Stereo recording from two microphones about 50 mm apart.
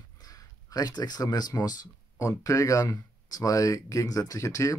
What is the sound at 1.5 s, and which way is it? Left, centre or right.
Speech, left.